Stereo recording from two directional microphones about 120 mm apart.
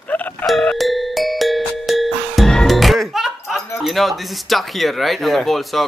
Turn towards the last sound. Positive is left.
turn(degrees=0)  # may be behind; listen again after turning